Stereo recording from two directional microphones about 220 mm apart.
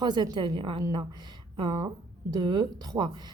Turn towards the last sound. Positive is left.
turn(degrees=-20)  # may be behind; listen again after turning